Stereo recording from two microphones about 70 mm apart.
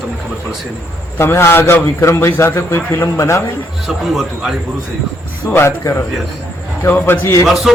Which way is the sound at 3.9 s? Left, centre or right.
Centre.